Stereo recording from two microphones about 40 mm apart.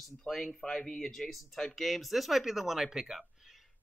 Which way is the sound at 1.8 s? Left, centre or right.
Centre.